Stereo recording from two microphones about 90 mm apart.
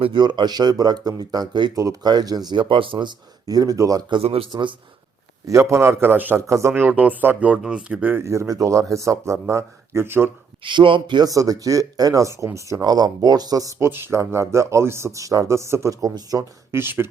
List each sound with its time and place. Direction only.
0.0 s speech: 65° right (ahead or behind)
1.7 s speech: 40° right (ahead or behind)
4.1 s a man's voice: 90° right
5.5 s a man's voice: 35° right (ahead or behind)
6.5 s speech: 30° right (ahead or behind)
6.8 s a man's voice: 20° right (ahead or behind)
8.1 s speech: 35° right (ahead or behind)
10.6 s speech: 70° right (ahead or behind)
11.3 s speech: 40° right (ahead or behind)
12.8 s speech: 45° right (ahead or behind)
16.7 s a man's voice: 25° right (ahead or behind)